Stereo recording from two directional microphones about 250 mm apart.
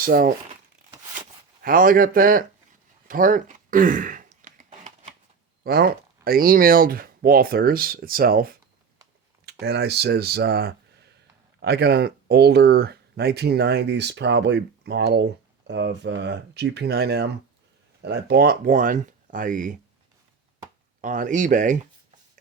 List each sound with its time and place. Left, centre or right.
0.0 s speech: right
1.6 s speech: right
3.1 s a sound: right
5.6 s speech: right
21.0 s speech: right